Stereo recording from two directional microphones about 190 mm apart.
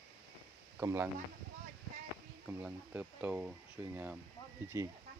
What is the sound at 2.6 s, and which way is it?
Speech, 5° right (ahead or behind).